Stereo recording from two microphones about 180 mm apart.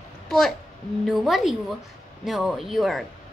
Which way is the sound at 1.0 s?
Centre (ahead or behind).